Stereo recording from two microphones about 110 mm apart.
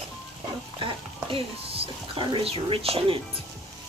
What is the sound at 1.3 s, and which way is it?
Speech, 60° right (ahead or behind).